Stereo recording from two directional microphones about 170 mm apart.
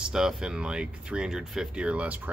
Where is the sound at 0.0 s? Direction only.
5° right (ahead or behind).